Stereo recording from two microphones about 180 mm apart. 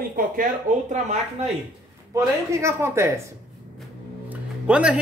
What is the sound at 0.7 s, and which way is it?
Speech, 45° right (ahead or behind).